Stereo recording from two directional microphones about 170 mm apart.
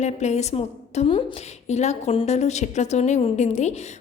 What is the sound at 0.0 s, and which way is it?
A woman's voice, 40° left (ahead or behind).